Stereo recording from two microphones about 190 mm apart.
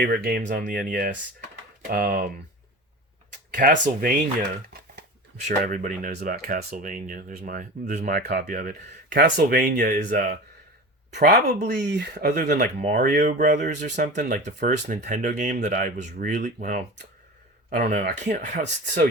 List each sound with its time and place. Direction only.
0.0 s speech: 50° right (ahead or behind)
3.5 s speech: 45° right (ahead or behind)
5.5 s speech: 45° right (ahead or behind)
6.1 s speech: 60° right (ahead or behind)
11.1 s speech: 60° right (ahead or behind)
12.8 s speech: 45° right (ahead or behind)